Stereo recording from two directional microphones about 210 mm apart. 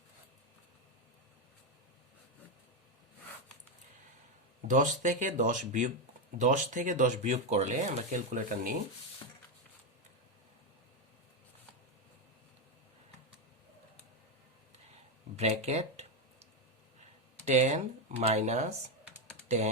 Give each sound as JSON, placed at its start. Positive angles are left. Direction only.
{"t": 4.7, "sound": "speech", "side_deg": -35}
{"t": 15.4, "sound": "speech", "side_deg": -30}
{"t": 17.4, "sound": "speech", "side_deg": -35}